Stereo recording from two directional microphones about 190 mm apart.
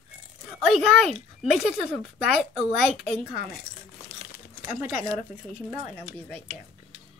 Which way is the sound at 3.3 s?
50° left (ahead or behind).